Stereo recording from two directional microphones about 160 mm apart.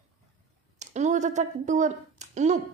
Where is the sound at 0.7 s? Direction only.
45° right (ahead or behind).